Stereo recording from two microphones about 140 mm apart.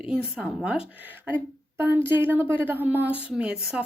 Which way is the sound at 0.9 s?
10° right (ahead or behind).